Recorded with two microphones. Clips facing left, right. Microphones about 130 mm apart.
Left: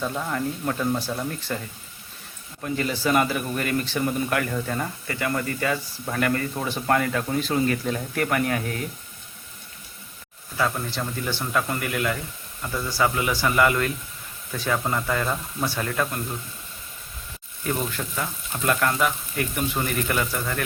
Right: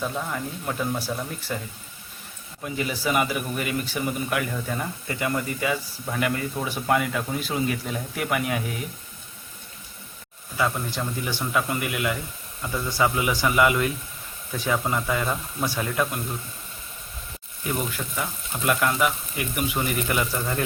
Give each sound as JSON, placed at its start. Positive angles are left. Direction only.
{"t": 0.0, "sound": "speech", "side_deg": 0}
{"t": 2.6, "sound": "speech", "side_deg": -10}
{"t": 5.0, "sound": "speech", "side_deg": -20}
{"t": 10.9, "sound": "speech", "side_deg": -10}
{"t": 17.6, "sound": "speech", "side_deg": -5}